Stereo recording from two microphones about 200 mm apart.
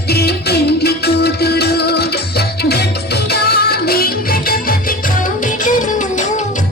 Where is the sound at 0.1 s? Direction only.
55° left (ahead or behind).